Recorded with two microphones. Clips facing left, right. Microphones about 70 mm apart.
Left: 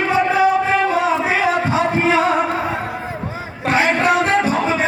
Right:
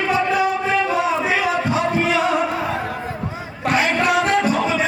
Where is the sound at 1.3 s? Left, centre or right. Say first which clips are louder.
Left 2 dB; left.